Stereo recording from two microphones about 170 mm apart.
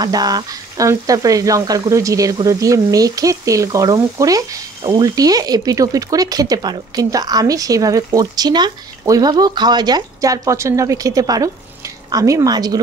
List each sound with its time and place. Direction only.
0.0 s speech: 20° right (ahead or behind)